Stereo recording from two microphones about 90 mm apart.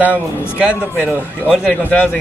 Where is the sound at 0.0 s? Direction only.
15° right (ahead or behind).